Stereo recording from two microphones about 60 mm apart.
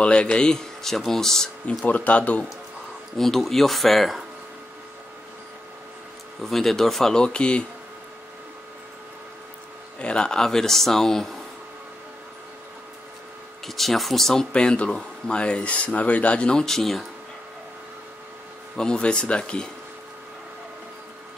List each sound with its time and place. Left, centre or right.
0.0 s speech: centre
1.9 s speech: left
3.2 s speech: centre
6.4 s speech: centre
9.9 s speech: centre
13.7 s speech: centre
14.5 s speech: centre
18.8 s speech: centre